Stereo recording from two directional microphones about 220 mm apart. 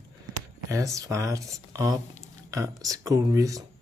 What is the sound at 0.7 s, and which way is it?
Speech, 15° right (ahead or behind).